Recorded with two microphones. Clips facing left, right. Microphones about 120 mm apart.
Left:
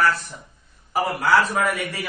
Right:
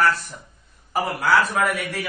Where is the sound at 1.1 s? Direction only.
Centre (ahead or behind).